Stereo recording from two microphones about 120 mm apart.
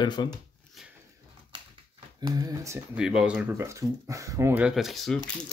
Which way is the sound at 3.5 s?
25° right (ahead or behind).